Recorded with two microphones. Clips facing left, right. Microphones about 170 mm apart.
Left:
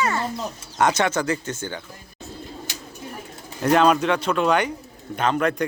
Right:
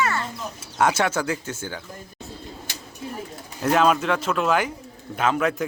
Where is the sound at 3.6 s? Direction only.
Centre (ahead or behind).